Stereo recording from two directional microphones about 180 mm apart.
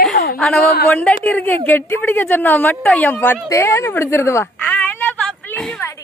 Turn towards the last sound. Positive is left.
turn(degrees=5)  # may be behind; listen again after turning